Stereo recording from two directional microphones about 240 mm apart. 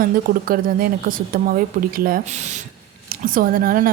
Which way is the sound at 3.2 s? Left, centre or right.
Right.